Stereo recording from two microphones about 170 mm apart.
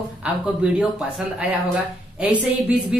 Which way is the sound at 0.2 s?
5° right (ahead or behind).